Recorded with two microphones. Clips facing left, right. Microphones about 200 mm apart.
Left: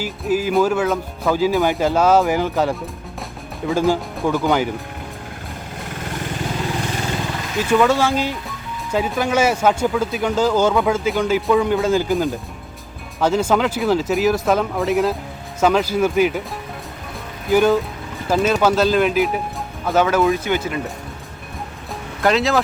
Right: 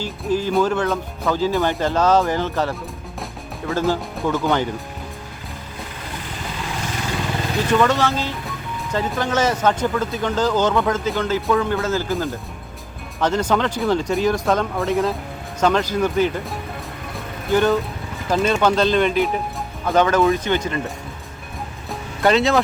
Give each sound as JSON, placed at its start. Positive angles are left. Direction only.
{"t": 0.0, "sound": "speech", "side_deg": 10}
{"t": 7.7, "sound": "speech", "side_deg": 10}
{"t": 17.5, "sound": "speech", "side_deg": 10}
{"t": 22.2, "sound": "speech", "side_deg": 0}